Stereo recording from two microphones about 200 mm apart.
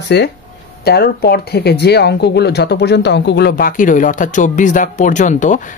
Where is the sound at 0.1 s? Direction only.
60° left (ahead or behind).